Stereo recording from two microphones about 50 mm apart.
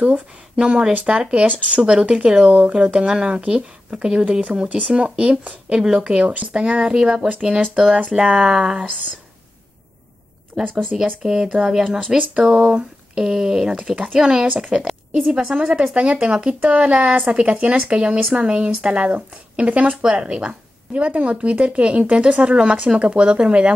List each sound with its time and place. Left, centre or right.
0.0 s speech: right
1.4 s speech: right
1.8 s speech: centre
10.5 s speech: centre
10.9 s speech: centre